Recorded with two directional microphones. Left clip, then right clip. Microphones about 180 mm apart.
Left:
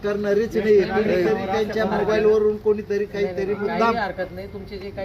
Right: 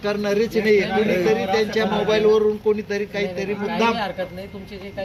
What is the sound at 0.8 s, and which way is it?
Speech, 5° right (ahead or behind).